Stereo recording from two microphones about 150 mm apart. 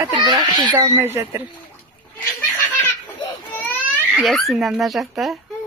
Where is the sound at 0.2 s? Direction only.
30° right (ahead or behind).